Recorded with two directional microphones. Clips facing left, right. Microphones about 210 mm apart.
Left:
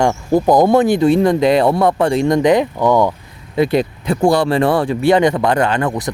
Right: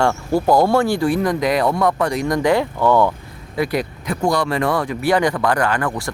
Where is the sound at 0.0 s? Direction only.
20° left (ahead or behind).